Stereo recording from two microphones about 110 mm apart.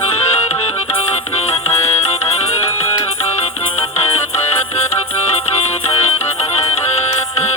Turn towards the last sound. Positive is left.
turn(degrees=70)  # may be behind; listen again after turning